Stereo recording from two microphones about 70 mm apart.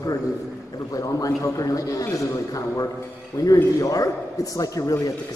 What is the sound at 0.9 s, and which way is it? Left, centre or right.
A man's voice, left.